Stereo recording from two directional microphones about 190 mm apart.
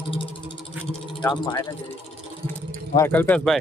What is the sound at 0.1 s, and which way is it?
Vehicle, 25° left (ahead or behind).